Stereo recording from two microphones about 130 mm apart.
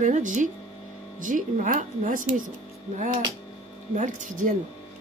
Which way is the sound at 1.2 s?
85° right.